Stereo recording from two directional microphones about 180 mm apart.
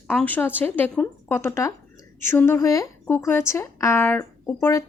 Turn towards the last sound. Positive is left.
turn(degrees=15)  # may be behind; listen again after turning